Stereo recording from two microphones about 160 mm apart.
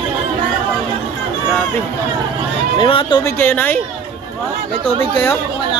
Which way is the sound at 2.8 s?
30° left (ahead or behind).